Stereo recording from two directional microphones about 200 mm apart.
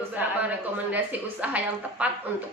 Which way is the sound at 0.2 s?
10° right (ahead or behind).